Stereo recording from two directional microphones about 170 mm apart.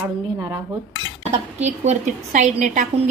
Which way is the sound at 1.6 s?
45° right (ahead or behind).